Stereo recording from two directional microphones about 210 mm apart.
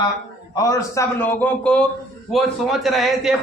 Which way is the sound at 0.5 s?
15° left (ahead or behind).